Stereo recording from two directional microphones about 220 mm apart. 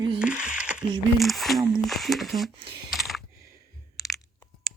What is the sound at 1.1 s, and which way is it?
Speech, centre (ahead or behind).